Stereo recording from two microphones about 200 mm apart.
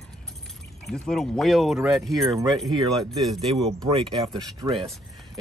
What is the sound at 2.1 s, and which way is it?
Speech, 20° right (ahead or behind).